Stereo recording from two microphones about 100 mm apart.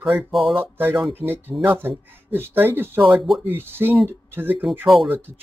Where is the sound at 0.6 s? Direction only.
20° right (ahead or behind).